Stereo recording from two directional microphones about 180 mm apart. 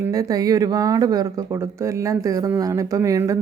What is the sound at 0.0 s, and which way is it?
Speech, 20° right (ahead or behind).